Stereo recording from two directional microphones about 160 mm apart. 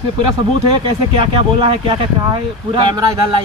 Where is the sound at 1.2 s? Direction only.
35° right (ahead or behind).